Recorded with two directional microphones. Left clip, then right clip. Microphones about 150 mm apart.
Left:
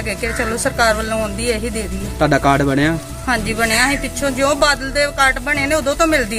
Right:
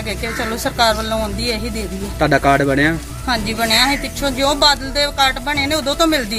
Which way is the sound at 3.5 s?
15° left (ahead or behind).